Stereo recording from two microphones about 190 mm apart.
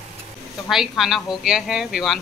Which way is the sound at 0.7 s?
Centre (ahead or behind).